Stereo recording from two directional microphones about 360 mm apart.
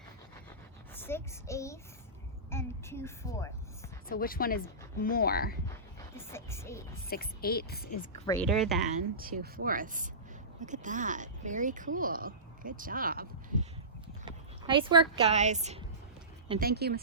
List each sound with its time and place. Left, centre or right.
0.9 s a woman's voice: centre
4.1 s a woman's voice: left
6.1 s a woman's voice: centre
7.1 s a woman's voice: left
8.3 s speech: centre
8.9 s speech: right